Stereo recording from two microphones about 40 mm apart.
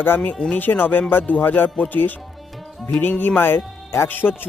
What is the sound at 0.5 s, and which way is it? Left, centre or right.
Speech, left.